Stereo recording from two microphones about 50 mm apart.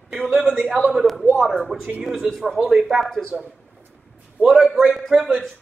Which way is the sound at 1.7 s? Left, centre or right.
Centre.